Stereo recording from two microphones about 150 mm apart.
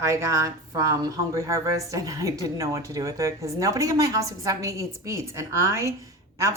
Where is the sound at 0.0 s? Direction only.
20° right (ahead or behind).